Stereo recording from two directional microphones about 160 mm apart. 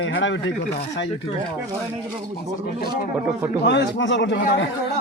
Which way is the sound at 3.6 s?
90° left.